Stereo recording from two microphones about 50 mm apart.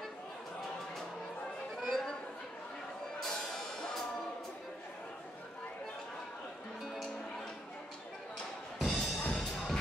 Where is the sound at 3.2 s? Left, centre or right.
Centre.